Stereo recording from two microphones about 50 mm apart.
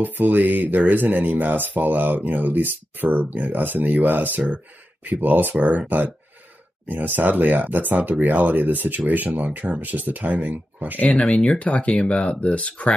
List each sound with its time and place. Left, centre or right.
0.0 s speech: right
11.0 s speech: left